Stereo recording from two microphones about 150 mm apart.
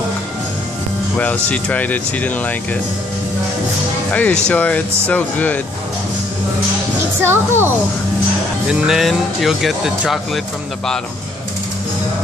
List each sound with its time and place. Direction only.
1.1 s speech: 10° left (ahead or behind)
4.1 s speech: 10° left (ahead or behind)
7.2 s a child's voice: 15° right (ahead or behind)
8.6 s speech: 5° right (ahead or behind)